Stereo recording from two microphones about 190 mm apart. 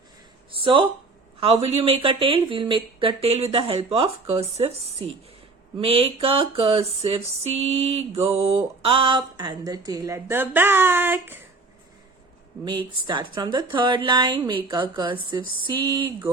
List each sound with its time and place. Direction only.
0.5 s speech: 25° right (ahead or behind)
5.7 s a sound: 30° right (ahead or behind)
8.4 s a woman's voice: 30° right (ahead or behind); by 11.3 s 10° right (ahead or behind)
12.6 s speech: 25° right (ahead or behind)